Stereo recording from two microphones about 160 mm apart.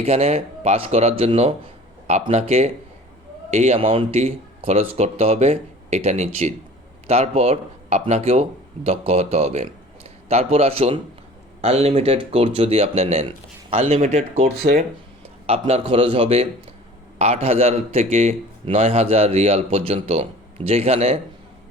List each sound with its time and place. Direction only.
0.0 s a man's voice: 40° right (ahead or behind)
14.5 s speech: 80° right
15.4 s a man's voice: 35° right (ahead or behind)